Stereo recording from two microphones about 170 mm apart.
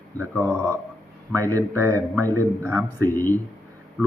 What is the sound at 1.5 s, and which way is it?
A man's voice, 15° right (ahead or behind).